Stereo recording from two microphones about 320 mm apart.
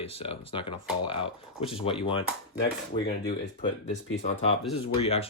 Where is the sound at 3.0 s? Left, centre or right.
Left.